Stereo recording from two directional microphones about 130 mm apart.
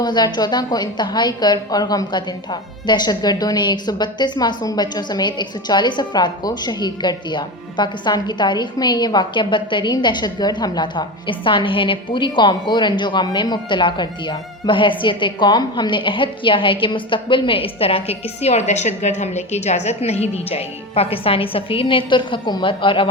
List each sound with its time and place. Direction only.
0.0 s a woman's voice: 35° left (ahead or behind)